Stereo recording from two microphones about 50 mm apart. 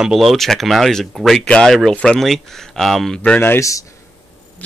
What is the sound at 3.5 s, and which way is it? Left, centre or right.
Speech, left.